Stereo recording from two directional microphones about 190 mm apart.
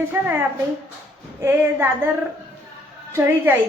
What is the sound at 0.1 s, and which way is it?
Speech, 15° right (ahead or behind).